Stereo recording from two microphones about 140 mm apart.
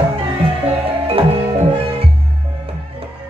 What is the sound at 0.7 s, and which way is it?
Music, 45° right (ahead or behind).